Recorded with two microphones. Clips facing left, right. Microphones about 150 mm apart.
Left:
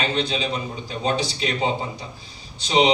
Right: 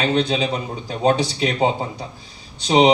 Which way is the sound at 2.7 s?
50° right (ahead or behind).